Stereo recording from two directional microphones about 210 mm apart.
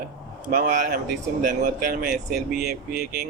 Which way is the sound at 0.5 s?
40° right (ahead or behind).